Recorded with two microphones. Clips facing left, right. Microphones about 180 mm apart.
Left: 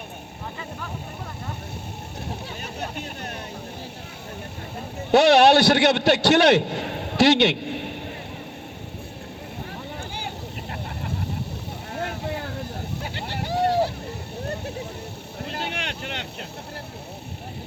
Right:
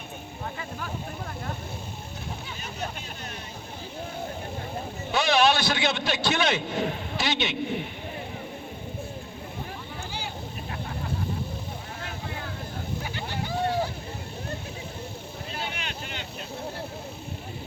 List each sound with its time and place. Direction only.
5.1 s a man's voice: 70° left (ahead or behind)
13.5 s boat: 40° left (ahead or behind)
15.4 s vehicle: 75° left (ahead or behind)